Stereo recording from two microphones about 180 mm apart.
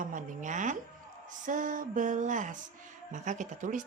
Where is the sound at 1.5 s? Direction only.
45° right (ahead or behind).